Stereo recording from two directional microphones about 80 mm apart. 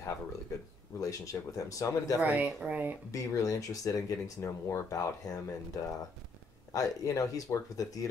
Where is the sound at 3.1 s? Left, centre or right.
Left.